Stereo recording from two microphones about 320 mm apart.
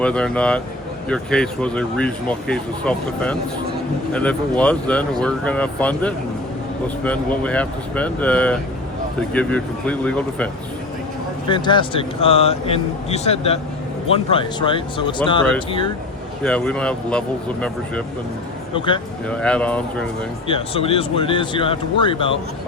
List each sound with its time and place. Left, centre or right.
0.0 s speech: centre
11.4 s a man's voice: centre
16.4 s speech: centre
19.3 s speech: centre
20.5 s a man's voice: centre